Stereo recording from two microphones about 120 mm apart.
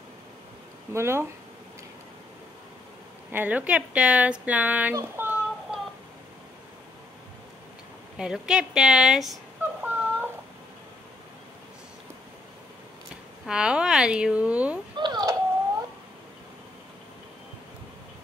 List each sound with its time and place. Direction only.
0.9 s speech: 20° right (ahead or behind)
3.3 s speech: 15° right (ahead or behind)
5.7 s a sound: 5° right (ahead or behind)
8.2 s speech: 5° right (ahead or behind)
9.6 s female singing: 15° right (ahead or behind)
13.5 s speech: 5° right (ahead or behind)
15.0 s a sound: 35° right (ahead or behind)